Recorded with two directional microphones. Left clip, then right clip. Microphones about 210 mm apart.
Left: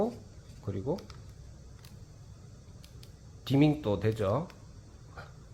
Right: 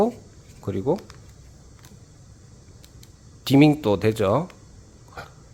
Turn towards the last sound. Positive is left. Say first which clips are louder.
# right 10 dB
turn(degrees=-40)  # may be behind; listen again after turning